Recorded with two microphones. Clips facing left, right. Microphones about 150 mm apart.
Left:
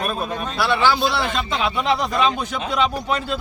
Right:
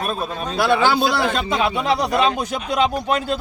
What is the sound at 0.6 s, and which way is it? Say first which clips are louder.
Speech: right 2 dB; 50° right (ahead or behind).